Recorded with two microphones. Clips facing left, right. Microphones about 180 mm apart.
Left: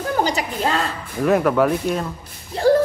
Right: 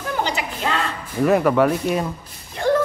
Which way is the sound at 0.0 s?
40° left (ahead or behind).